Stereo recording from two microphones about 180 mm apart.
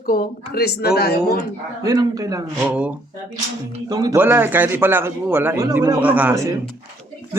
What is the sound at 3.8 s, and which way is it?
Speech, 20° right (ahead or behind).